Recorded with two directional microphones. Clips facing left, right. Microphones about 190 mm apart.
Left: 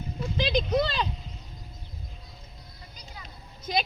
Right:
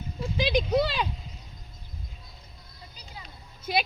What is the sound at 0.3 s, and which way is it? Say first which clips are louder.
Speech: right 1 dB; 10° right (ahead or behind).